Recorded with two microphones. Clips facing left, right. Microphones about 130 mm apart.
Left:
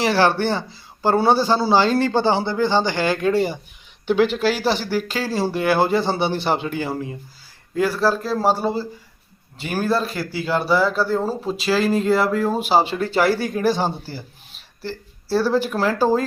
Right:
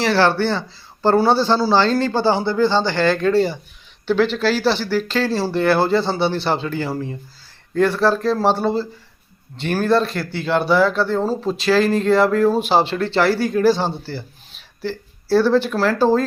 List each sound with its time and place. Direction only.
0.0 s speech: 15° left (ahead or behind)
7.8 s speech: 5° left (ahead or behind)